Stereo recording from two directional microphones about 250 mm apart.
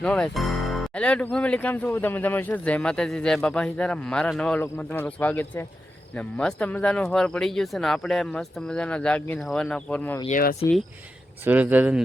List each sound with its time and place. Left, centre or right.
0.0 s speech: centre
10.2 s speech: left
11.4 s speech: centre